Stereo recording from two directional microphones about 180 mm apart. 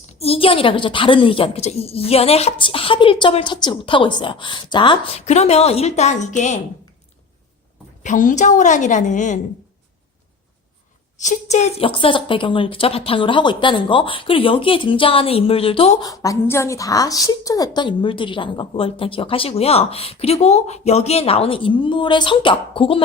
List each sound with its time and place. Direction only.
0.2 s a woman's voice: 30° left (ahead or behind)
8.0 s a woman's voice: 45° left (ahead or behind)
11.2 s a woman's voice: 40° left (ahead or behind)
16.0 s a woman's voice: 20° left (ahead or behind)